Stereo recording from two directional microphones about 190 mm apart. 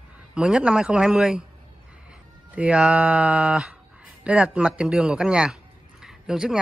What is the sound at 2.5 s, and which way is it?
Speech, 5° right (ahead or behind).